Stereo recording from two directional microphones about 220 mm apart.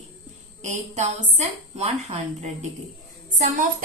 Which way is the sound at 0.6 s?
30° right (ahead or behind).